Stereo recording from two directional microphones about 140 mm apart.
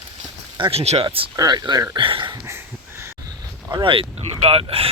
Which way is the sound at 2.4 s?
20° right (ahead or behind).